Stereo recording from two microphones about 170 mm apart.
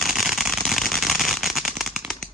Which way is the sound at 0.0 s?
Centre (ahead or behind).